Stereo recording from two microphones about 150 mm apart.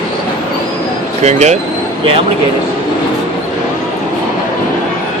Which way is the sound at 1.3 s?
50° right (ahead or behind).